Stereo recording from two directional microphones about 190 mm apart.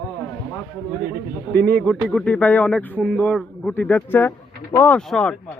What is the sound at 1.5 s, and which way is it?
A man's voice, 10° left (ahead or behind).